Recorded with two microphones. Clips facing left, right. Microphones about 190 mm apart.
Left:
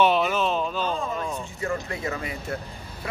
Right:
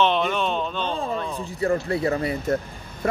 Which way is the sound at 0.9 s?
35° right (ahead or behind).